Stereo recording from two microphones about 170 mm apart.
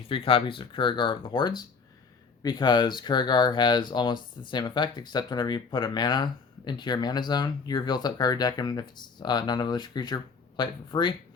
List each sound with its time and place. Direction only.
0.1 s speech: 30° left (ahead or behind)